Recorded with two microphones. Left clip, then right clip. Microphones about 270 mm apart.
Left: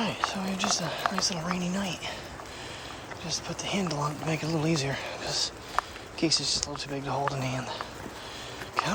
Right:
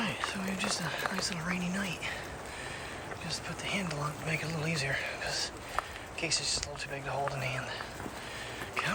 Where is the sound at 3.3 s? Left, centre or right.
Centre.